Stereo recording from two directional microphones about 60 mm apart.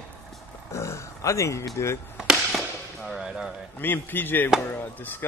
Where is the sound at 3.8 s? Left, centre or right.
Left.